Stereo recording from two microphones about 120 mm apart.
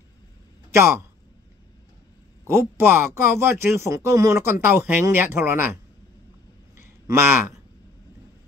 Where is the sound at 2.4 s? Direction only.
20° right (ahead or behind).